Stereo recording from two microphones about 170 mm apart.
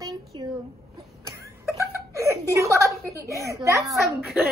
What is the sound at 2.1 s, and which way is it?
Chuckle, 15° right (ahead or behind).